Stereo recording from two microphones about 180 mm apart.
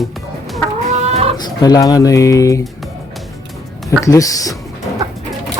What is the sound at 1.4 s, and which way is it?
Speech, 20° left (ahead or behind).